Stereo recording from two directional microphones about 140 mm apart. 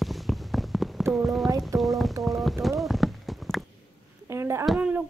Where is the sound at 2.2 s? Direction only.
Centre (ahead or behind).